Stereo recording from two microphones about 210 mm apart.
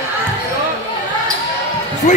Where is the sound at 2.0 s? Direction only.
35° left (ahead or behind).